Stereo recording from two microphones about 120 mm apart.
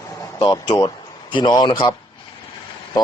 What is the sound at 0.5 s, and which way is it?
Speech, 30° left (ahead or behind).